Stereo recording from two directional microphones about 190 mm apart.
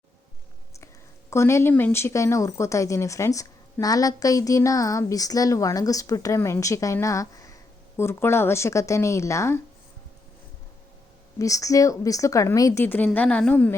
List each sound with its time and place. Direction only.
1.3 s speech: 15° left (ahead or behind)
11.3 s speech: 15° left (ahead or behind)